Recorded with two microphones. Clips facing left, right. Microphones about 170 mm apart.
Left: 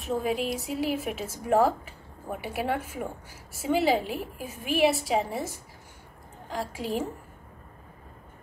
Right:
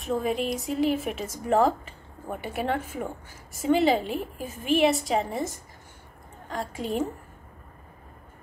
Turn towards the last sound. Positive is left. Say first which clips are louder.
# right 2 dB
turn(degrees=5)  # may be behind; listen again after turning